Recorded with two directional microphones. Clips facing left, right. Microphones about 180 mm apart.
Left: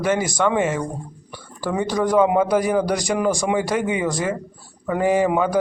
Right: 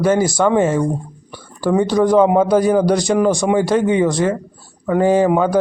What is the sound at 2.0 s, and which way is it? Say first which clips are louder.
A man's voice: right 3 dB; 30° right (ahead or behind).